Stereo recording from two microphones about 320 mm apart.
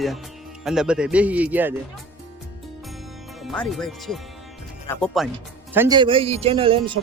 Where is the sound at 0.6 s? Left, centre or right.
Centre.